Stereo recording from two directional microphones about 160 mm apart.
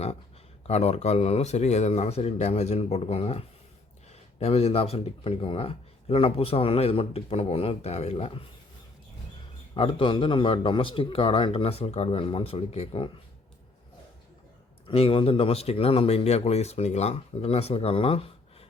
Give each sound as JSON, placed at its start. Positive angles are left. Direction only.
{"t": 0.7, "sound": "speech", "side_deg": 40}
{"t": 9.7, "sound": "speech", "side_deg": 30}
{"t": 14.8, "sound": "speech", "side_deg": 35}